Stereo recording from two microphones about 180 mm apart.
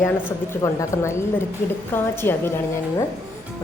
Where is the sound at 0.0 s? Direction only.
15° left (ahead or behind).